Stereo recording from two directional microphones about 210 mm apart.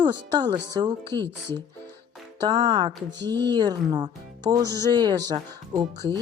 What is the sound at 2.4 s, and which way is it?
Speech, 20° right (ahead or behind).